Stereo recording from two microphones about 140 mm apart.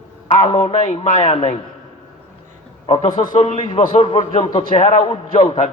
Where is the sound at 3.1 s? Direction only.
30° left (ahead or behind); by 5.0 s 50° left (ahead or behind).